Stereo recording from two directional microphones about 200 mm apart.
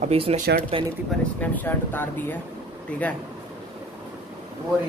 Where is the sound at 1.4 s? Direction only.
10° left (ahead or behind).